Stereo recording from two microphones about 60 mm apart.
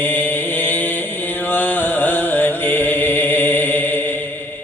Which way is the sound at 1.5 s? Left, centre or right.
Left.